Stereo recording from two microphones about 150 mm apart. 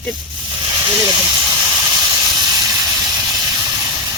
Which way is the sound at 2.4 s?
25° right (ahead or behind).